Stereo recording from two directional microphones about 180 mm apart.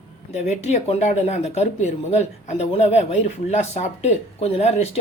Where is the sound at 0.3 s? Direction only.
40° left (ahead or behind).